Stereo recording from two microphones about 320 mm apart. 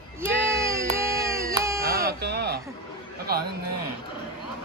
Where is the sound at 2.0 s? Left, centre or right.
Right.